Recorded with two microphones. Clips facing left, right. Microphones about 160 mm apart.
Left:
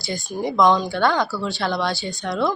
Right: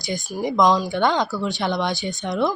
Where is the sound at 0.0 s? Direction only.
20° right (ahead or behind).